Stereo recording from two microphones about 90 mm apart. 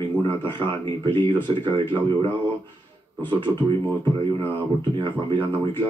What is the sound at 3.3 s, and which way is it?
A man's voice, 60° right (ahead or behind).